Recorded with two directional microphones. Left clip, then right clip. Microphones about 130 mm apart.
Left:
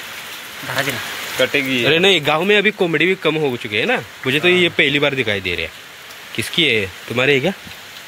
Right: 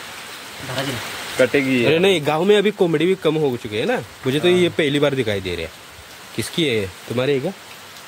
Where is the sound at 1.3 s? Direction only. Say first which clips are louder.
Even; 80° right.